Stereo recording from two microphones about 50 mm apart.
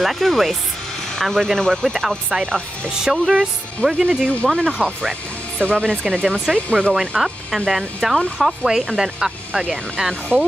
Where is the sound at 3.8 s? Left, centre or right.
Centre.